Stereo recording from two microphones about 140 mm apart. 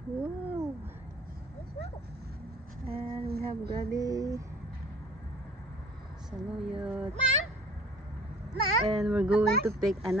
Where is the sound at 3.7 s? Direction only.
25° right (ahead or behind).